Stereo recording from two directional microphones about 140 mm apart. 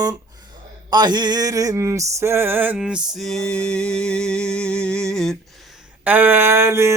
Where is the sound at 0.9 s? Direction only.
30° right (ahead or behind); by 3.0 s 5° right (ahead or behind).